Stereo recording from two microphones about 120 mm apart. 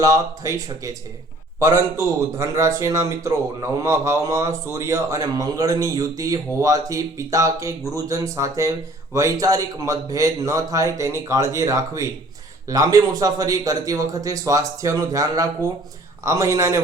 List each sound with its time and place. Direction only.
0.0 s speech: 30° right (ahead or behind)